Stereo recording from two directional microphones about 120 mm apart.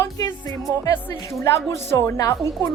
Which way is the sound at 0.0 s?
30° left (ahead or behind).